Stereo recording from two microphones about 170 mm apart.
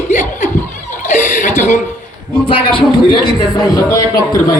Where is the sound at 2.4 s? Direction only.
30° left (ahead or behind).